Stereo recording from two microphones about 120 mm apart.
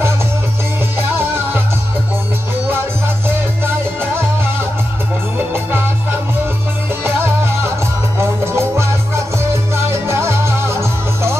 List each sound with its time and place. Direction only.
0.9 s music: 20° right (ahead or behind)
3.3 s music: 20° right (ahead or behind)
5.5 s music: 20° right (ahead or behind)
8.2 s music: 20° right (ahead or behind)